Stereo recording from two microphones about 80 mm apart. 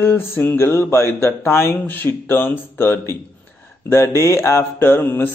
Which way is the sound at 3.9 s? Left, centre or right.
Left.